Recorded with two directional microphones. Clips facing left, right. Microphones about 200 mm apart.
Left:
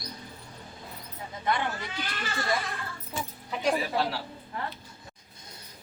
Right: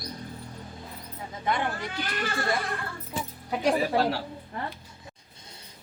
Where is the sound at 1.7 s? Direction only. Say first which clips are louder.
Right 3 dB; 55° right (ahead or behind).